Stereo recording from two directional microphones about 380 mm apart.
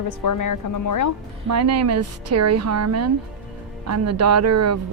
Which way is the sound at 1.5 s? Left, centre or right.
Right.